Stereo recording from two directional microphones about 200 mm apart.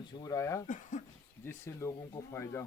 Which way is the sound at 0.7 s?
40° left (ahead or behind).